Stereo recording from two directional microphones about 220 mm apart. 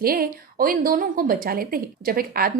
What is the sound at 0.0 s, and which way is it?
A woman's voice, 40° right (ahead or behind).